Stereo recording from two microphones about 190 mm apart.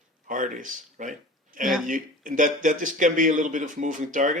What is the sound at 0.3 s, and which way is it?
Speech, 45° right (ahead or behind).